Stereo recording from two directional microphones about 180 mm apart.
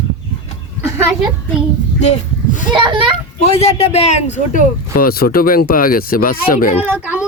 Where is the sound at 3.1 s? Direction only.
35° left (ahead or behind).